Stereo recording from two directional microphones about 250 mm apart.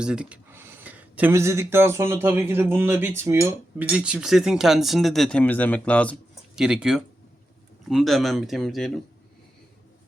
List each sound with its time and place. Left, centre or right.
0.0 s speech: centre